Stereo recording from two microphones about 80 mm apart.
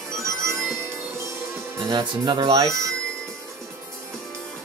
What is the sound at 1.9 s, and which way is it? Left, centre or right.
Speech, right.